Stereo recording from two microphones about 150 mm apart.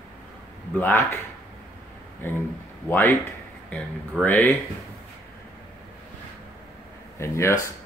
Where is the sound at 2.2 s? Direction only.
15° left (ahead or behind).